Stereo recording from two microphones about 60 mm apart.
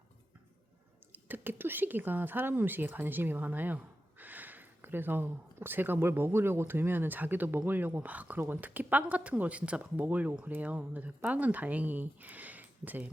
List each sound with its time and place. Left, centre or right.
1.1 s speech: right